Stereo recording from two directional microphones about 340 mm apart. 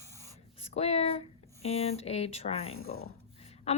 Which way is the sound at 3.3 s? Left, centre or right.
Centre.